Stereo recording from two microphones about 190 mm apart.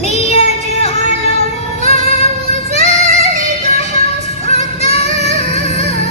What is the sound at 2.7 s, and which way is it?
Child singing, 40° right (ahead or behind).